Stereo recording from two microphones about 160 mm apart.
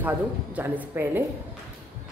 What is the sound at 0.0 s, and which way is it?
A woman's voice, 10° right (ahead or behind).